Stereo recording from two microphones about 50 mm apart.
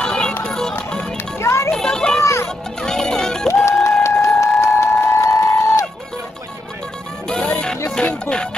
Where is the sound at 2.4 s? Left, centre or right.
Centre.